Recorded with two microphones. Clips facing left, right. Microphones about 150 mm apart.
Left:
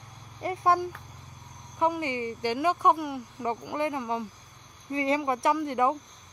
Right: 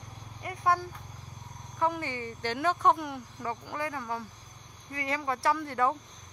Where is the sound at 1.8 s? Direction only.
15° left (ahead or behind).